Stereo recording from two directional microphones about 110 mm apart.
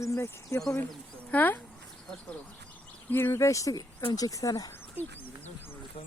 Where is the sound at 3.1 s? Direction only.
25° left (ahead or behind).